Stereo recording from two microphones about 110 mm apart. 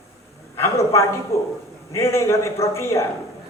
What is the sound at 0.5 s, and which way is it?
A man's voice, 25° left (ahead or behind).